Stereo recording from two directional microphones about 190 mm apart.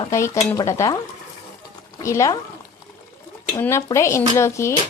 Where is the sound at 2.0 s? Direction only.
15° left (ahead or behind).